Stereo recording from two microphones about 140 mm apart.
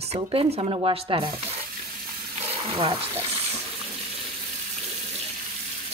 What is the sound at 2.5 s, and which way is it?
Speech, 45° right (ahead or behind).